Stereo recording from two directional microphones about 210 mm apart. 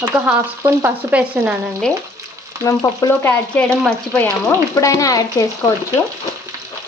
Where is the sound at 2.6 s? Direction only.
15° left (ahead or behind).